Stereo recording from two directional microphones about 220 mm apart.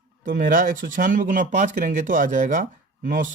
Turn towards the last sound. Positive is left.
turn(degrees=-40)  # may be behind; listen again after turning